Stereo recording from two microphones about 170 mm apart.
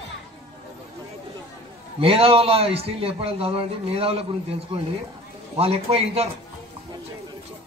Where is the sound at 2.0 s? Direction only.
35° right (ahead or behind).